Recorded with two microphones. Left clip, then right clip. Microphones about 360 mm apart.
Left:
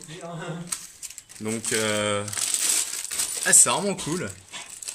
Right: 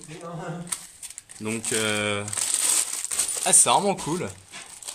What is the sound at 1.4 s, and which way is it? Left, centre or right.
Speech, centre.